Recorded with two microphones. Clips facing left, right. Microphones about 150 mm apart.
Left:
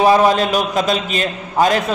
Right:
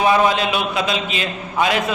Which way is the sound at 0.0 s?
40° left (ahead or behind).